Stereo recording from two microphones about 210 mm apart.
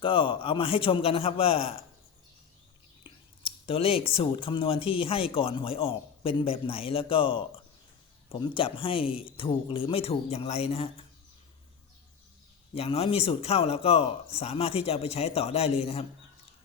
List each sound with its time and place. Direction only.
0.0 s speech: 25° left (ahead or behind)
3.0 s speech: 25° left (ahead or behind)
12.7 s speech: 30° left (ahead or behind)